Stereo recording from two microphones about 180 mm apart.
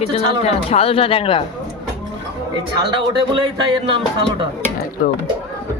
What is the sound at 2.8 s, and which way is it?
Speech, 25° right (ahead or behind).